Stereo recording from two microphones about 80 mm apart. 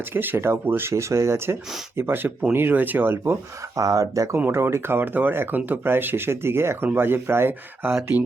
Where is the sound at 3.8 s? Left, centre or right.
Right.